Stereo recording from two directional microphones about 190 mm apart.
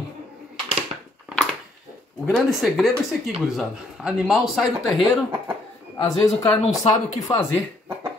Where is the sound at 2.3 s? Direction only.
Centre (ahead or behind).